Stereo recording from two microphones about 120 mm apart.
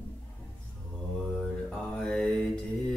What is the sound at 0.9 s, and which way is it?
Mantra, 5° left (ahead or behind).